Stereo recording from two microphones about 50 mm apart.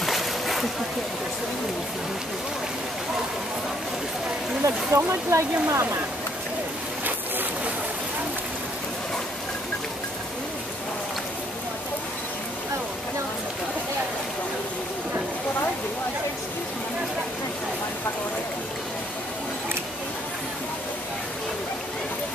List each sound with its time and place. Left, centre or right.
0.0 s splash: centre
4.6 s speech: right